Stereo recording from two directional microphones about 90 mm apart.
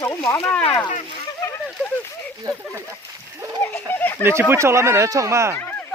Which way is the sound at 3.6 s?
25° left (ahead or behind).